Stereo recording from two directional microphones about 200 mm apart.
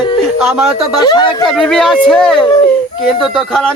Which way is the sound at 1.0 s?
20° left (ahead or behind).